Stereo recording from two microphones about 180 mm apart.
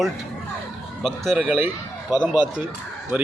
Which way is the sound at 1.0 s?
Centre (ahead or behind).